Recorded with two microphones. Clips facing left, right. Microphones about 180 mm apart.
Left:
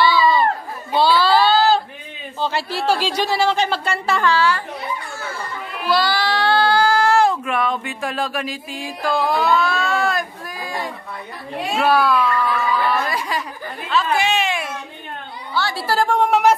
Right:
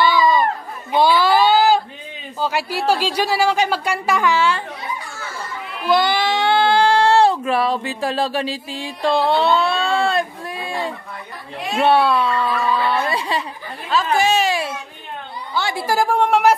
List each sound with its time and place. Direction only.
0.0 s chatter: 15° right (ahead or behind)
0.9 s a sound: 15° right (ahead or behind)
2.4 s speech: 10° right (ahead or behind)
5.9 s speech: 20° right (ahead or behind)
13.8 s a sound: 40° right (ahead or behind)
15.5 s a woman's voice: 20° right (ahead or behind)
16.1 s a woman's voice: centre (ahead or behind)